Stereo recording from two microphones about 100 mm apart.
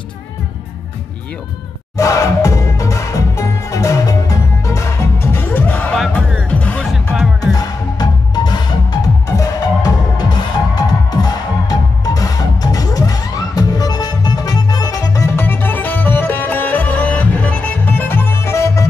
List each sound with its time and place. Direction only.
2.0 s music: 35° left (ahead or behind); by 6.9 s 15° left (ahead or behind)
6.9 s music: 5° right (ahead or behind)
7.5 s music: 40° left (ahead or behind)
15.3 s music: 20° left (ahead or behind)